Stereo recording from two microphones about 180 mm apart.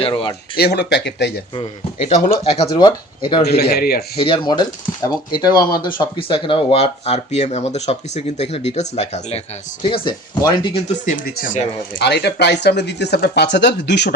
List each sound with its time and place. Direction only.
0.0 s speech: 25° left (ahead or behind)
0.5 s speech: 65° left (ahead or behind)
2.4 s speech: 25° left (ahead or behind)
3.4 s speech: 60° left (ahead or behind)
4.2 s speech: 25° left (ahead or behind)
9.8 s speech: 25° left (ahead or behind); by 11.6 s 45° left (ahead or behind)
11.9 s speech: 70° left (ahead or behind)